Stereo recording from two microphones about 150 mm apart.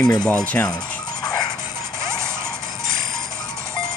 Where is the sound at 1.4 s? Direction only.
15° right (ahead or behind).